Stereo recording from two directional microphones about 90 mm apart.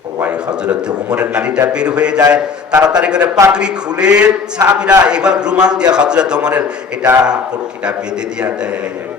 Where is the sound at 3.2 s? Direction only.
40° right (ahead or behind).